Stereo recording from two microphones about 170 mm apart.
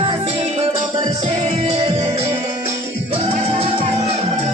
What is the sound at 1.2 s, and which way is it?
Music, 40° right (ahead or behind).